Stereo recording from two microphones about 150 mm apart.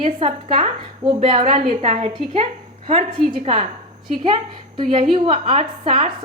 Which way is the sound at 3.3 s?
40° right (ahead or behind).